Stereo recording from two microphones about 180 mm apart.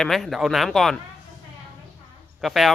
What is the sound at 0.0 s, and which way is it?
Speech, centre (ahead or behind).